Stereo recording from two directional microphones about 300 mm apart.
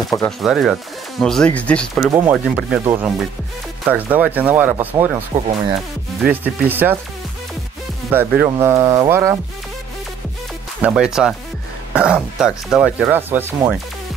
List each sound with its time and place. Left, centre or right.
0.1 s speech: centre
5.3 s speech: right
6.7 s speech: centre
8.1 s speech: centre
10.8 s speech: centre